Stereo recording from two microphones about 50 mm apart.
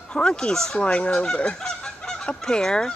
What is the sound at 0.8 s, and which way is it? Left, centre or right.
Speech, left.